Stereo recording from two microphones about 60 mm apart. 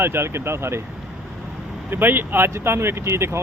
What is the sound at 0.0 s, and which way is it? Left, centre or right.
Speech, right.